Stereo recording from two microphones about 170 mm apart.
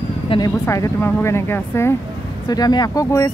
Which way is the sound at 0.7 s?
15° left (ahead or behind).